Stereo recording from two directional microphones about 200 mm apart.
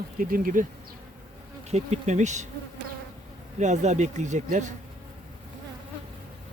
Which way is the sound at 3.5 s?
35° right (ahead or behind).